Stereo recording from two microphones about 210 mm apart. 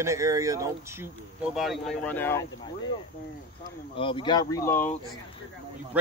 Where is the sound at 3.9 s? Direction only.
25° left (ahead or behind).